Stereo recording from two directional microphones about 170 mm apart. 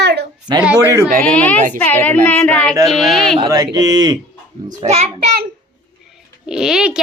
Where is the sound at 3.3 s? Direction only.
25° right (ahead or behind).